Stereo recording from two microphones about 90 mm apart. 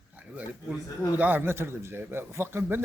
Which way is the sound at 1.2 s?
20° right (ahead or behind).